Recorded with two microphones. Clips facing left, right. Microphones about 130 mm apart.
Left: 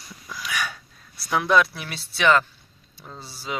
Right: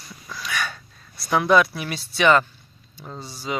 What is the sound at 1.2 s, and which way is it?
Speech, centre (ahead or behind).